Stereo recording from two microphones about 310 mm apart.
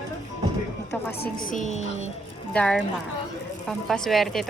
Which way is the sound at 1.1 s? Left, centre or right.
Left.